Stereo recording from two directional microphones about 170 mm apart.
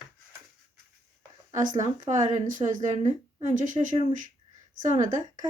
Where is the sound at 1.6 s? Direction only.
50° right (ahead or behind).